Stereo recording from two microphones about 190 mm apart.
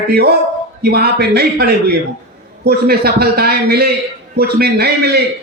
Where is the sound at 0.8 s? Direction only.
55° right (ahead or behind).